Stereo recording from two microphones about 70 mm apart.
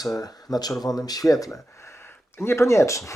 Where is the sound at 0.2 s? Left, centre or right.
Left.